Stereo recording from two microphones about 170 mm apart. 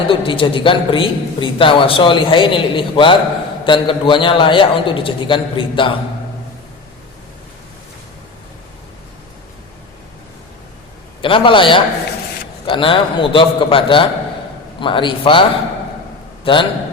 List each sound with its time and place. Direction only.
0.1 s a woman's voice: 30° left (ahead or behind)
11.2 s a man's voice: 30° left (ahead or behind)